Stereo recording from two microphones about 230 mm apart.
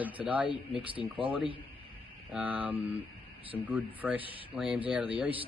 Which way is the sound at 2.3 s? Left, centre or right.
Centre.